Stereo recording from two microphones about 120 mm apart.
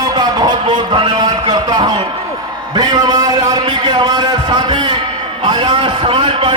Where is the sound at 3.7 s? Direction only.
40° right (ahead or behind).